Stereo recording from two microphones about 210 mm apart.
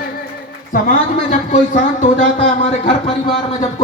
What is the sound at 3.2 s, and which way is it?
Speech, 25° left (ahead or behind).